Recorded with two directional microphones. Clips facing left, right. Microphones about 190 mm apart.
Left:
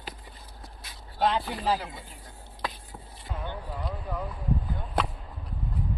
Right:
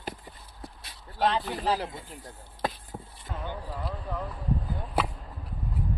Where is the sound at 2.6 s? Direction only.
50° right (ahead or behind).